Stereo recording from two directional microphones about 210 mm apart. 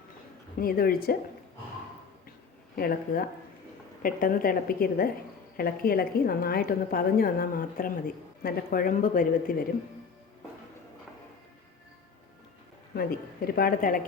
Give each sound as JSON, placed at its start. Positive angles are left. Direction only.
{"t": 0.6, "sound": "a woman's voice", "side_deg": 45}
{"t": 2.7, "sound": "a woman's voice", "side_deg": 45}
{"t": 12.9, "sound": "a woman's voice", "side_deg": 45}